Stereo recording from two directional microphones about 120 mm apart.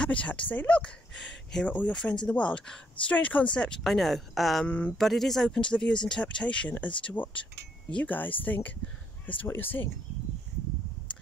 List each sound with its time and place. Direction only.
0.0 s speech: 10° left (ahead or behind)
4.6 s speech: 10° left (ahead or behind)
4.9 s speech: centre (ahead or behind); by 9.8 s 15° left (ahead or behind)